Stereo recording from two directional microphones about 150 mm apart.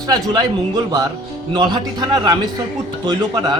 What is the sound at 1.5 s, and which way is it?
Speech, 30° right (ahead or behind).